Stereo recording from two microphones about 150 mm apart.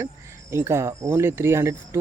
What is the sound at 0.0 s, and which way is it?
Speech, 15° right (ahead or behind).